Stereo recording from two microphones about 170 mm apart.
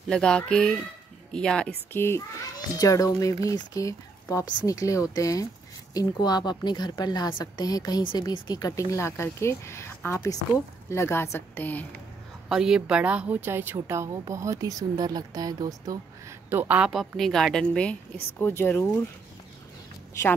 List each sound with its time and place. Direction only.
0.1 s a woman's voice: 5° left (ahead or behind)
12.4 s a woman's voice: 5° right (ahead or behind); by 18.9 s 15° left (ahead or behind)